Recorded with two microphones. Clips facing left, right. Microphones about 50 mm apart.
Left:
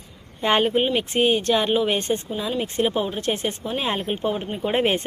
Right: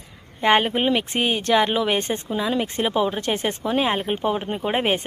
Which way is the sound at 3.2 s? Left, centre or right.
Right.